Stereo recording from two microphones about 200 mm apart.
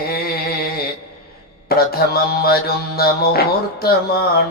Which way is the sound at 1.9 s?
50° left (ahead or behind).